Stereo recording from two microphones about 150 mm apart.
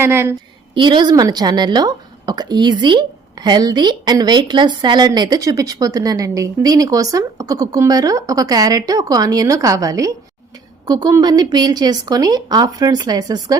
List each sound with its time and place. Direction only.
0.0 s a woman's voice: 15° right (ahead or behind)
0.7 s a woman's voice: 30° right (ahead or behind)